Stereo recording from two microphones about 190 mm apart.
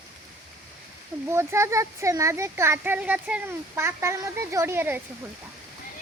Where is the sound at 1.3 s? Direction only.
15° right (ahead or behind).